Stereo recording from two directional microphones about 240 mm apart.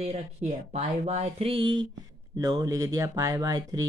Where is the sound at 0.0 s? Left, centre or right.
Right.